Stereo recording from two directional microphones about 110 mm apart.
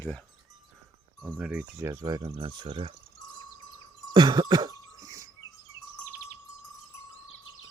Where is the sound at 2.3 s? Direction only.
50° right (ahead or behind).